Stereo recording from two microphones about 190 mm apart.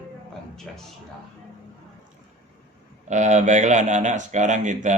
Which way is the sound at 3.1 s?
40° right (ahead or behind).